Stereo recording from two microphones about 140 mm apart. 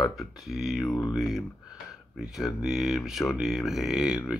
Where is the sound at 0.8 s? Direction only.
25° left (ahead or behind).